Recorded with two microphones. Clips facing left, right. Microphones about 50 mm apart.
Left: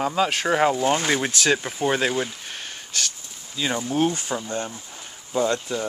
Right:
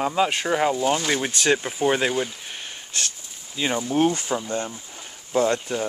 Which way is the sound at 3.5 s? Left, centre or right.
Centre.